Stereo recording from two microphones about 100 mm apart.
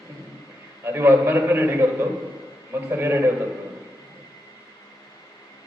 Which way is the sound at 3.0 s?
25° right (ahead or behind).